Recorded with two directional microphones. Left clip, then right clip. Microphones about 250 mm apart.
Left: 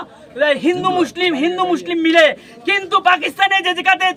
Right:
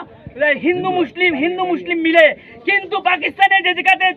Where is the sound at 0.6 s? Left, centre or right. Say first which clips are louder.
Left 1 dB; centre.